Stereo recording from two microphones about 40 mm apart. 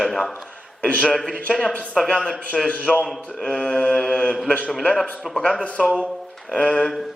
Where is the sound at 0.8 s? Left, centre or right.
Left.